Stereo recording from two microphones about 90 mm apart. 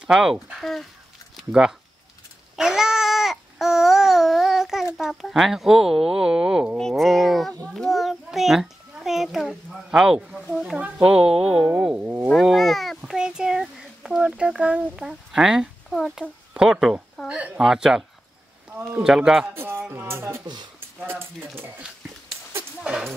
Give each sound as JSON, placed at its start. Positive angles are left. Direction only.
{"t": 0.0, "sound": "speech", "side_deg": -5}
{"t": 2.5, "sound": "babbling", "side_deg": -5}
{"t": 4.9, "sound": "speech", "side_deg": 0}
{"t": 6.8, "sound": "speech", "side_deg": 0}
{"t": 7.7, "sound": "a sound", "side_deg": 0}
{"t": 9.8, "sound": "speech", "side_deg": -5}
{"t": 11.8, "sound": "speech", "side_deg": -20}
{"t": 12.4, "sound": "speech", "side_deg": 0}
{"t": 16.5, "sound": "speech", "side_deg": -10}
{"t": 18.7, "sound": "speech", "side_deg": -25}
{"t": 19.0, "sound": "speech", "side_deg": -5}
{"t": 19.4, "sound": "speech", "side_deg": -25}
{"t": 22.8, "sound": "speech", "side_deg": -5}